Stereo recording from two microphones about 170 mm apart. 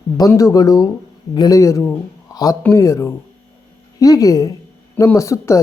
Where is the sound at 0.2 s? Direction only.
20° left (ahead or behind).